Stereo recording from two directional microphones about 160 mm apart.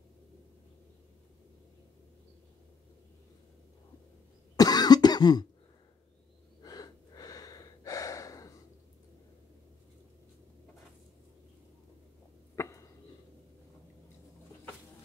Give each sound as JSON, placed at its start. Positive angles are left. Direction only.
{"t": 4.6, "sound": "cough", "side_deg": 25}
{"t": 6.6, "sound": "gasp", "side_deg": 25}
{"t": 12.5, "sound": "a sound", "side_deg": 20}